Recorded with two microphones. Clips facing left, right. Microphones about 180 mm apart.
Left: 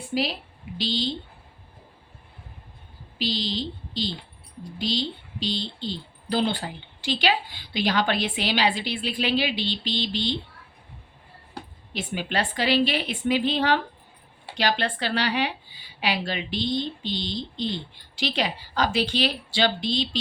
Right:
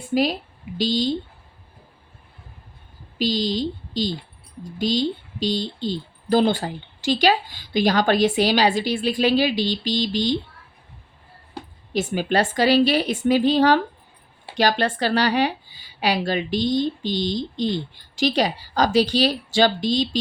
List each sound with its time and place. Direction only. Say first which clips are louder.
0.1 s speech: right 6 dB; 45° right (ahead or behind)
3.2 s speech: right 6 dB; 45° right (ahead or behind)
11.9 s a woman's voice: right 7 dB; 45° right (ahead or behind)